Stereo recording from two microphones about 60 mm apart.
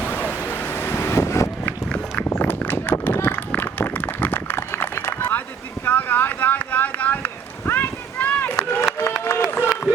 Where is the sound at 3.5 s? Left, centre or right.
Left.